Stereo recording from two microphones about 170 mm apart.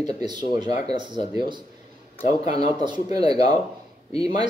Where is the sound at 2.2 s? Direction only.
40° left (ahead or behind).